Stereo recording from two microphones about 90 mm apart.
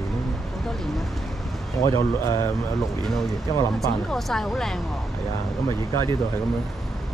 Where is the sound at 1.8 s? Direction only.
35° left (ahead or behind).